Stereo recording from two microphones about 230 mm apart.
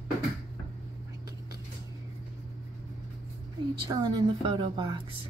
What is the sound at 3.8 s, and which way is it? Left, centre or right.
A woman's voice, centre.